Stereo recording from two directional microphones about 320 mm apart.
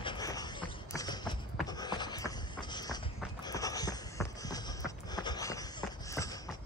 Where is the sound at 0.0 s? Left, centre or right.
Centre.